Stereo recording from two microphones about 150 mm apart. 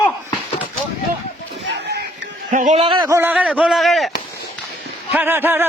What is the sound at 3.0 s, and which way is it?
A man's voice, 15° right (ahead or behind).